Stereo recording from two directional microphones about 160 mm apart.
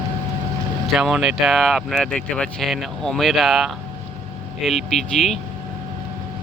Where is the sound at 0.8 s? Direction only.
Centre (ahead or behind).